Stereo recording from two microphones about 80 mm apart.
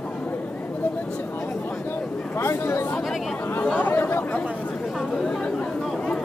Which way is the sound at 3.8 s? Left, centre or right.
Left.